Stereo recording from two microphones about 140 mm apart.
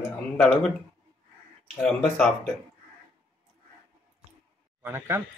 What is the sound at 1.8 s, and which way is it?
Speech, 5° left (ahead or behind).